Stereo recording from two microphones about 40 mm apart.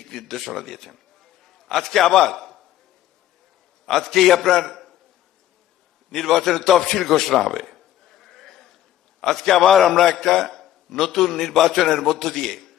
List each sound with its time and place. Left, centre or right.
0.0 s a man's voice: centre
3.8 s a man's voice: centre
6.1 s a man's voice: centre